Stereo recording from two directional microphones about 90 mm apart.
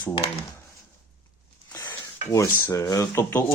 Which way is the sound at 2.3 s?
40° left (ahead or behind).